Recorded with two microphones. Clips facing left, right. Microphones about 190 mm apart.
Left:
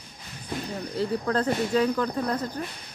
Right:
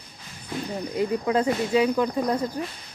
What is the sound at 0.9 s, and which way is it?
Speech, 15° right (ahead or behind).